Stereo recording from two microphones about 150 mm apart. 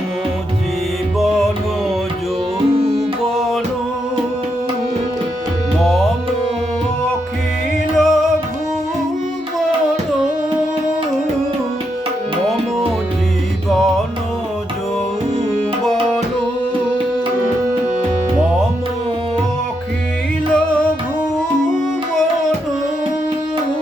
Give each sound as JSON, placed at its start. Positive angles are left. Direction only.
{"t": 1.2, "sound": "music", "side_deg": 0}
{"t": 5.8, "sound": "music", "side_deg": 5}
{"t": 7.9, "sound": "music", "side_deg": 0}
{"t": 13.7, "sound": "music", "side_deg": 0}